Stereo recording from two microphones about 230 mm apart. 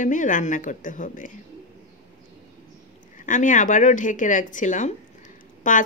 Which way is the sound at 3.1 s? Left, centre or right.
Left.